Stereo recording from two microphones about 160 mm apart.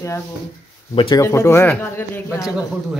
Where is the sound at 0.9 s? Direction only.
35° left (ahead or behind).